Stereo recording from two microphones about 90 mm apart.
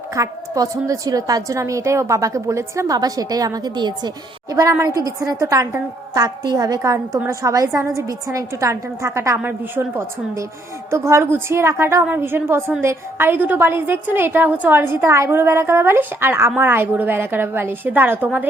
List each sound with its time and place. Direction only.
0.1 s a woman's voice: 40° right (ahead or behind)
12.0 s a woman's voice: 25° right (ahead or behind)